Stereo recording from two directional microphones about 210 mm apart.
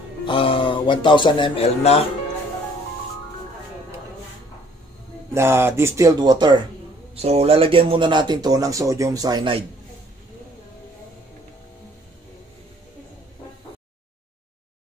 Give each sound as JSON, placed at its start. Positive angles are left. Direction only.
{"t": 0.2, "sound": "speech", "side_deg": 25}
{"t": 5.3, "sound": "speech", "side_deg": -10}